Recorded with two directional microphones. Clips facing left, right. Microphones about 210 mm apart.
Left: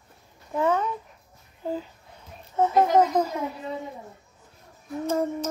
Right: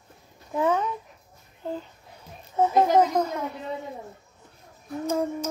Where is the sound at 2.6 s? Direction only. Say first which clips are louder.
Even; 10° right (ahead or behind).